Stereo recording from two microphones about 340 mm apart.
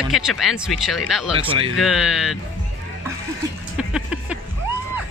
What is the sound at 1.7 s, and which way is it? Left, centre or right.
Speech, centre.